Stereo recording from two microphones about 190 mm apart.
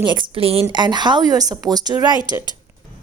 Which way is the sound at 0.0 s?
25° right (ahead or behind).